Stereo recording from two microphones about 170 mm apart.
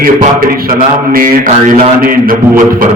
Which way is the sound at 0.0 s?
55° right (ahead or behind).